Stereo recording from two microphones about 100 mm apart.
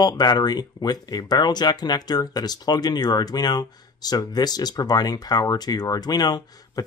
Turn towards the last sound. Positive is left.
turn(degrees=40)  # may be behind; listen again after turning